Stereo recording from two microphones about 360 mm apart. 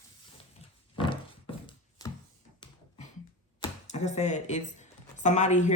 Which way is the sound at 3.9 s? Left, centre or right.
Centre.